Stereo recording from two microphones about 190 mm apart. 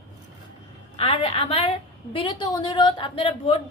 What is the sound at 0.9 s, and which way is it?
A woman's voice, 30° left (ahead or behind).